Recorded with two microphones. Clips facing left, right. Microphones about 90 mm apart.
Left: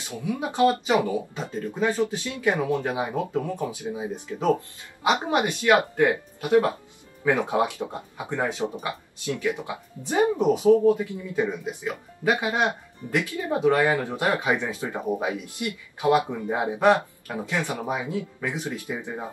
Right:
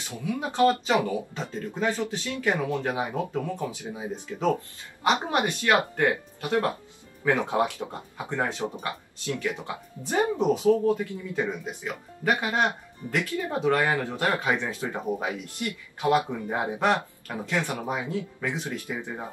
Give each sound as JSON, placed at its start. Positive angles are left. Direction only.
{"t": 0.1, "sound": "speech", "side_deg": 20}
{"t": 14.9, "sound": "speech", "side_deg": 5}
{"t": 15.2, "sound": "speech", "side_deg": 15}